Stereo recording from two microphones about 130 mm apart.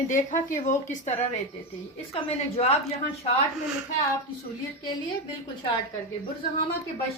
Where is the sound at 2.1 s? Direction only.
50° left (ahead or behind).